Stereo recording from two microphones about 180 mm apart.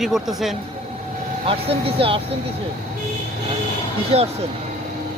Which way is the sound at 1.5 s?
30° right (ahead or behind).